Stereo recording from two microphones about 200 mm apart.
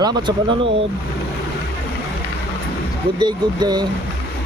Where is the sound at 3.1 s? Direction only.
20° right (ahead or behind).